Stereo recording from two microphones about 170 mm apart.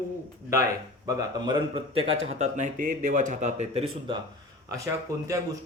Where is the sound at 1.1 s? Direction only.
25° right (ahead or behind).